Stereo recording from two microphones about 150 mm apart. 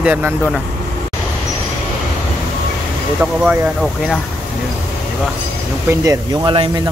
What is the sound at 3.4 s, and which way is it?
Speech, 10° right (ahead or behind).